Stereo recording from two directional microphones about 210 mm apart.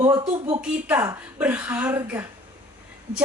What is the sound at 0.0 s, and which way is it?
A woman's voice, 20° right (ahead or behind).